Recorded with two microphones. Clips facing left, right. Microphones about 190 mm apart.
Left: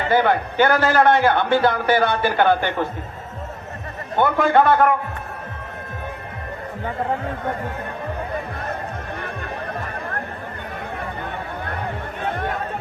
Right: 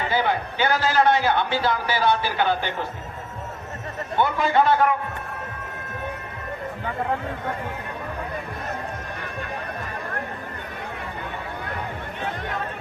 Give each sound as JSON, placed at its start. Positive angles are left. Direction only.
{"t": 0.1, "sound": "a man's voice", "side_deg": 55}
{"t": 4.2, "sound": "a man's voice", "side_deg": 55}